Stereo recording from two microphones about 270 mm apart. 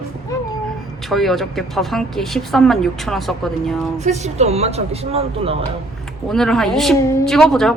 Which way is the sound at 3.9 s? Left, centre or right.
Right.